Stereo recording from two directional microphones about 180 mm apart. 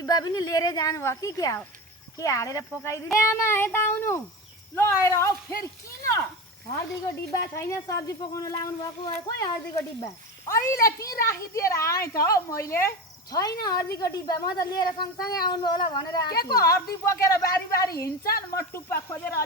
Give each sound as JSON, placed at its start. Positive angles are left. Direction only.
{"t": 0.0, "sound": "a woman's voice", "side_deg": 20}
{"t": 7.3, "sound": "a woman's voice", "side_deg": 15}
{"t": 18.0, "sound": "a woman's voice", "side_deg": 55}
{"t": 18.7, "sound": "speech", "side_deg": 15}